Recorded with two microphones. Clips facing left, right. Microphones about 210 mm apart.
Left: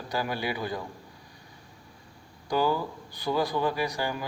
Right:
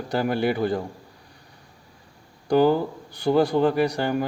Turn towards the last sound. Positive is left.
turn(degrees=-60)  # may be behind; listen again after turning